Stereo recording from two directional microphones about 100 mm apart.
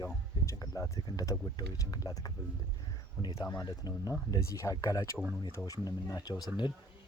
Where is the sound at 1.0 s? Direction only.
50° left (ahead or behind).